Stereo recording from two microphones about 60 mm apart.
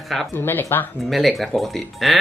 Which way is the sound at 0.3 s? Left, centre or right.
Left.